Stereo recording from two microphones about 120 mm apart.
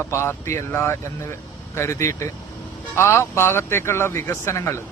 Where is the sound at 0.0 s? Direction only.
20° left (ahead or behind).